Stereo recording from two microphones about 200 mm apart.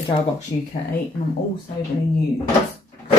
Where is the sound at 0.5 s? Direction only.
25° left (ahead or behind).